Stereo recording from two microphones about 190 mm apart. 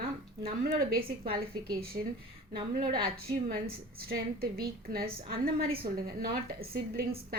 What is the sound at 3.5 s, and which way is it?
A woman's voice, 50° right (ahead or behind).